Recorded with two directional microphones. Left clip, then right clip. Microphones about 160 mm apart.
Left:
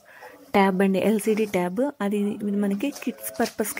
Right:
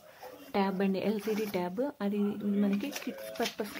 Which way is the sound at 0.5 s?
40° left (ahead or behind).